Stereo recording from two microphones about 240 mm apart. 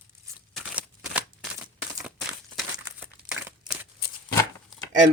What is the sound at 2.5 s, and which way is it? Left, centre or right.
Crumpling, centre.